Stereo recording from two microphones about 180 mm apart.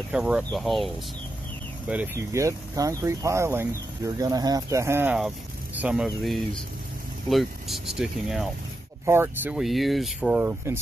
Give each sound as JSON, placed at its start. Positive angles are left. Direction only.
{"t": 0.1, "sound": "speech", "side_deg": -5}
{"t": 1.9, "sound": "speech", "side_deg": -10}
{"t": 9.0, "sound": "speech", "side_deg": -15}